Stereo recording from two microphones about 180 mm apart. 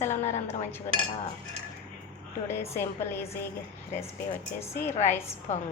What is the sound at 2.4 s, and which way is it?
Speech, 15° left (ahead or behind).